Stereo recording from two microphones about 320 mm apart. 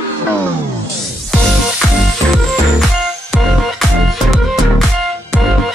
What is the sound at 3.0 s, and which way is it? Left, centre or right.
Music, centre.